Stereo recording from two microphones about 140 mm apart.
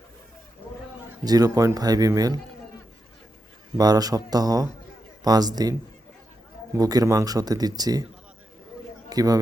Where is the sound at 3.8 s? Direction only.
25° right (ahead or behind).